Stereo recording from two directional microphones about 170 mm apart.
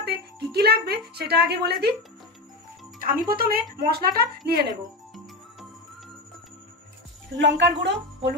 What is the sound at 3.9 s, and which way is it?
Speech, 65° right (ahead or behind).